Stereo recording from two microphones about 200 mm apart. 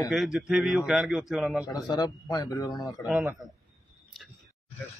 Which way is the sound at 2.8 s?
Centre (ahead or behind).